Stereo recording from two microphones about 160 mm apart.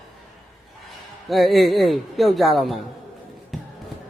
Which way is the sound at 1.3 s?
Centre (ahead or behind).